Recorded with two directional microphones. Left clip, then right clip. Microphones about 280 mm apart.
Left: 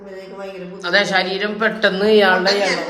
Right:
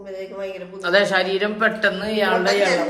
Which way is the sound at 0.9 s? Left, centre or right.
Centre.